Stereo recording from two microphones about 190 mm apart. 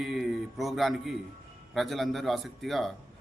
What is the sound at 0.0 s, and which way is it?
A man's voice, centre (ahead or behind).